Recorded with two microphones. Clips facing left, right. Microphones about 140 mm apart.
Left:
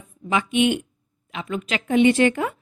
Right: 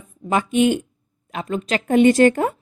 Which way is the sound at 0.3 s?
45° right (ahead or behind).